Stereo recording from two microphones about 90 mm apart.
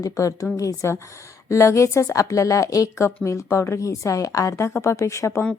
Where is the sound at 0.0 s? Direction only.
40° left (ahead or behind).